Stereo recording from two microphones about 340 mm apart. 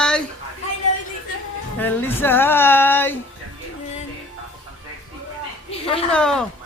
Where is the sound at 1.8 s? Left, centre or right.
Centre.